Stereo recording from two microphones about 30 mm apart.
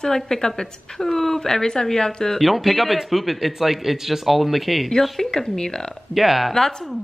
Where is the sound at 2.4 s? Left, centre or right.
Centre.